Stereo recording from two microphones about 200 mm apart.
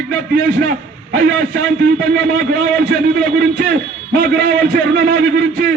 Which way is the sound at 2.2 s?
55° right (ahead or behind).